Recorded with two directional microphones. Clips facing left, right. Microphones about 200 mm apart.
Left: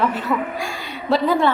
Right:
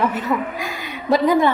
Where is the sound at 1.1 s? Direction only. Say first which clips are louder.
Right 2 dB; 15° right (ahead or behind).